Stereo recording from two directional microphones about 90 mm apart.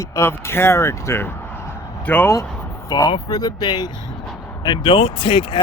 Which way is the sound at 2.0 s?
15° left (ahead or behind).